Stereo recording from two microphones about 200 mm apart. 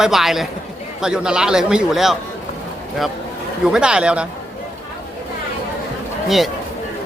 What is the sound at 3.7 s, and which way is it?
Speech, 5° right (ahead or behind).